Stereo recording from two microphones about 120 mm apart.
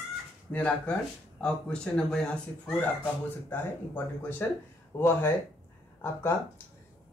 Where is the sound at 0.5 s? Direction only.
10° left (ahead or behind).